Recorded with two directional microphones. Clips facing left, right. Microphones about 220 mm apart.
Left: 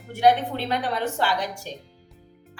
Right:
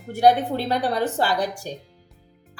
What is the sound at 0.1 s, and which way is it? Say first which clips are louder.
A woman's voice: right 2 dB; 40° right (ahead or behind).